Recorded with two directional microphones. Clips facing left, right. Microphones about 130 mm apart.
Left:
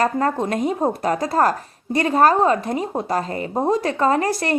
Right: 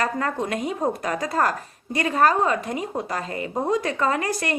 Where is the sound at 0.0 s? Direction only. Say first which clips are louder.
Left 5 dB; 35° left (ahead or behind).